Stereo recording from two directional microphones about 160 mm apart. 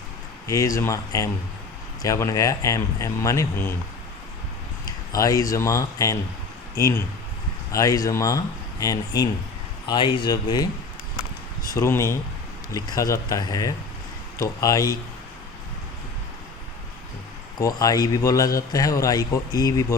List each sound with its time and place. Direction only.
0.4 s a man's voice: 20° left (ahead or behind)
5.1 s a man's voice: 20° left (ahead or behind)
11.7 s a man's voice: 20° left (ahead or behind)
17.6 s a man's voice: 20° left (ahead or behind)